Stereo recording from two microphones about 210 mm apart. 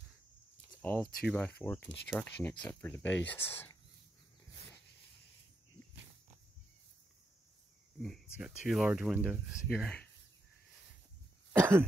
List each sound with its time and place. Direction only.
0.8 s speech: 10° left (ahead or behind)
8.0 s speech: centre (ahead or behind)
11.5 s cough: 10° right (ahead or behind)